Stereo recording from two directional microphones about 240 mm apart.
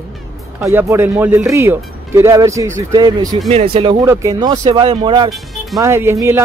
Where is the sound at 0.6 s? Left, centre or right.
Centre.